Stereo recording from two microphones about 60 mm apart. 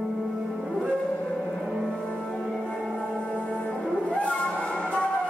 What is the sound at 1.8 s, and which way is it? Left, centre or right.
Music, centre.